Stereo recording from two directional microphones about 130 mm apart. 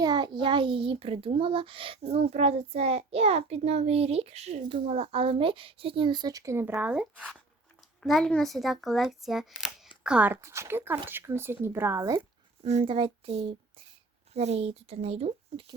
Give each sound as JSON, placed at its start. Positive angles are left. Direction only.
{"t": 0.0, "sound": "a child's voice", "side_deg": -30}
{"t": 6.7, "sound": "speech", "side_deg": -10}
{"t": 8.0, "sound": "a child's voice", "side_deg": 0}
{"t": 12.8, "sound": "a child's voice", "side_deg": -45}